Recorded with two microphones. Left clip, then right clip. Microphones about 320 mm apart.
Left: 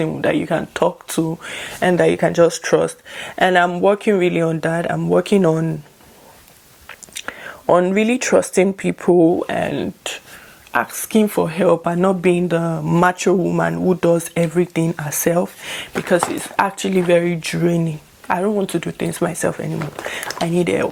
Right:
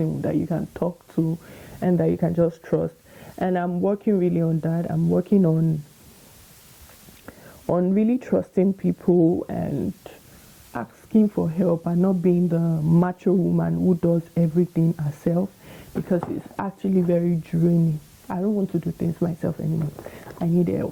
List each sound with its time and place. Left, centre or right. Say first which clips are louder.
0.2 s speech: left 8 dB; centre
7.3 s speech: left 10 dB; centre
9.1 s speech: left 6 dB; left
9.5 s speech: left 8 dB; centre
13.3 s speech: left 5 dB; left
13.6 s speech: left 7 dB; centre